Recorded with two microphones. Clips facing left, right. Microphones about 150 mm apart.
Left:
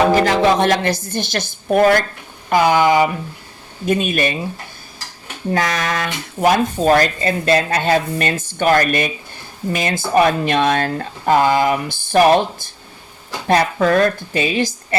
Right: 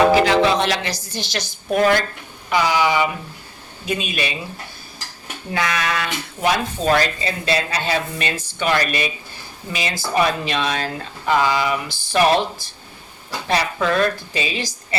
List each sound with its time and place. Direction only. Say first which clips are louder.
0.2 s speech: left 2 dB; 45° left (ahead or behind)
5.5 s speech: left 3 dB; 45° left (ahead or behind)